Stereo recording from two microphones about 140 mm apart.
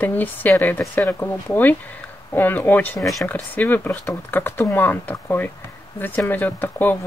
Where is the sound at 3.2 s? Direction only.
10° left (ahead or behind).